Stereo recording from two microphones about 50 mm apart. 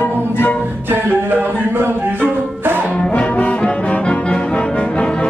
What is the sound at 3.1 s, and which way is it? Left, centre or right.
Brass instrument, left.